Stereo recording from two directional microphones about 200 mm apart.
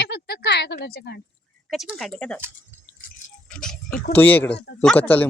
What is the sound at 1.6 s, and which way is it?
Speech, centre (ahead or behind).